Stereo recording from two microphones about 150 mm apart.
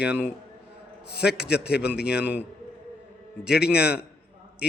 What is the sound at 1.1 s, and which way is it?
Speech, 90° left.